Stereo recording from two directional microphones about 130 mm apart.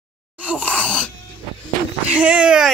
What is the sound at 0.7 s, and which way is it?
Wail, 10° left (ahead or behind).